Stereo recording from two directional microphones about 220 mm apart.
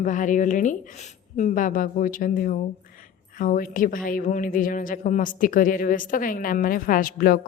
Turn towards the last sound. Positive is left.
turn(degrees=40)  # may be behind; listen again after turning